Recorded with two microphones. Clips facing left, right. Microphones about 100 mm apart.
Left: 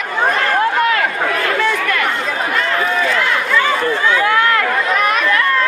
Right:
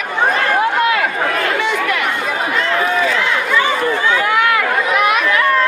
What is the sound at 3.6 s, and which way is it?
Run, 15° right (ahead or behind).